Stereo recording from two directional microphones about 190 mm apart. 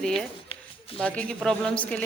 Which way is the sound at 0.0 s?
Centre (ahead or behind).